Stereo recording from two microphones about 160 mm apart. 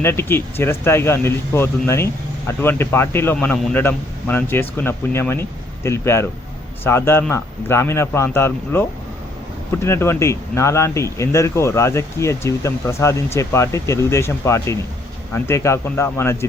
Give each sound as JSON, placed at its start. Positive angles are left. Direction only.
{"t": 0.0, "sound": "speech", "side_deg": 15}